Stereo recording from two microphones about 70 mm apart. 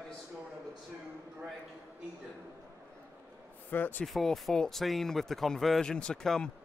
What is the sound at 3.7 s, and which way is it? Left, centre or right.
Speech, left.